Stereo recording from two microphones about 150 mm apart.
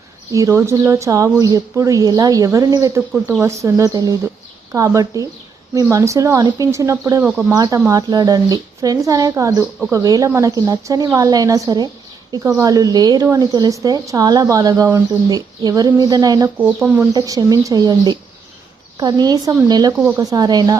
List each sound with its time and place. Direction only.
0.3 s a woman's voice: 20° right (ahead or behind)
7.3 s speech: 5° right (ahead or behind)
7.5 s a woman's voice: 25° right (ahead or behind)
16.6 s speech: 10° right (ahead or behind)
17.1 s a woman's voice: 25° right (ahead or behind)